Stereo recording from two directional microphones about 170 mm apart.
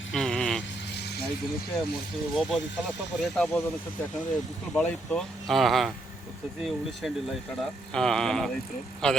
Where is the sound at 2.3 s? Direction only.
Centre (ahead or behind).